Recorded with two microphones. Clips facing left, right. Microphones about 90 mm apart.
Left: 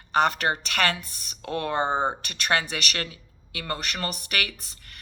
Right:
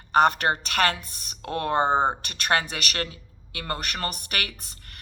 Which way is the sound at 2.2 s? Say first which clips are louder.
Right 1 dB; 45° right (ahead or behind).